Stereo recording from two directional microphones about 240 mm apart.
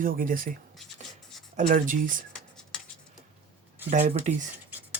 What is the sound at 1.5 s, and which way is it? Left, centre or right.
Speech, right.